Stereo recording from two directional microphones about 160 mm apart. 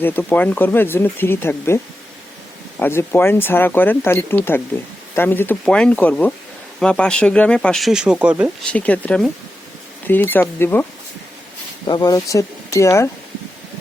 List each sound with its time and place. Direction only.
0.0 s speech: 10° left (ahead or behind); by 8.4 s 5° right (ahead or behind)
8.7 s speech: 10° left (ahead or behind)
11.9 s speech: 25° left (ahead or behind)